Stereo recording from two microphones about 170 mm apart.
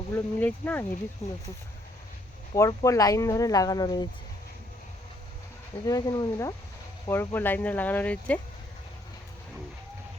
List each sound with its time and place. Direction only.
0.1 s speech: 10° left (ahead or behind)
1.2 s speech: 40° left (ahead or behind)
2.6 s speech: 20° left (ahead or behind)
5.8 s speech: 20° left (ahead or behind)